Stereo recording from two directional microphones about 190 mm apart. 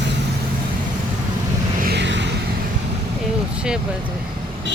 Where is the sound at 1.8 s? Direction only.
65° right (ahead or behind).